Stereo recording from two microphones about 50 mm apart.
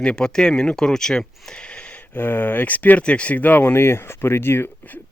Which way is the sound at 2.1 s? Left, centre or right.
Left.